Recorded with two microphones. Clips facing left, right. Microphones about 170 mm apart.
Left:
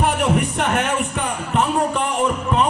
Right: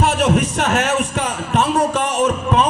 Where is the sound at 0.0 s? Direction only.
75° right (ahead or behind).